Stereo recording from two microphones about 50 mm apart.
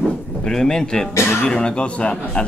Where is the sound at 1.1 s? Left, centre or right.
Left.